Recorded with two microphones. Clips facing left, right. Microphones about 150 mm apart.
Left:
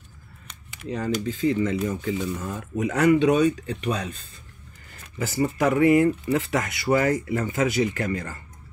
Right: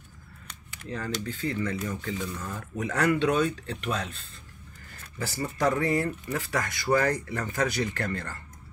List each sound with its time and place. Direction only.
0.8 s speech: 15° left (ahead or behind)
5.3 s speech: 10° left (ahead or behind)
6.2 s speech: 25° left (ahead or behind)
7.2 s speech: 10° left (ahead or behind)